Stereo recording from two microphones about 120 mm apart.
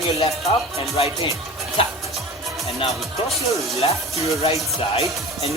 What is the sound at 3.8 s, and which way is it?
Music, 60° left (ahead or behind).